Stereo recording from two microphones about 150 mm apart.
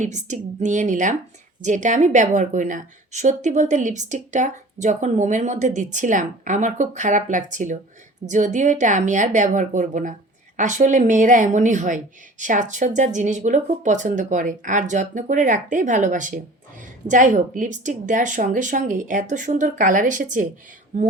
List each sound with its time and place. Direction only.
0.0 s a woman's voice: 55° right (ahead or behind)